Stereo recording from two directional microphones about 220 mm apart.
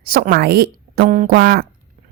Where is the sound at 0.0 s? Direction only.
45° right (ahead or behind).